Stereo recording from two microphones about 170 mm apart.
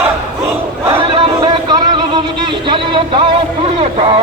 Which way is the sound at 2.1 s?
30° right (ahead or behind).